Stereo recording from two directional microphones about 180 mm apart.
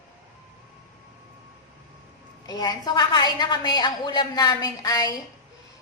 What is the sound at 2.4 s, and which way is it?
A woman's voice, 20° left (ahead or behind).